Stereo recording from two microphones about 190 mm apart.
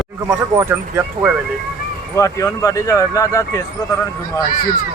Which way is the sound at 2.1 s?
15° left (ahead or behind).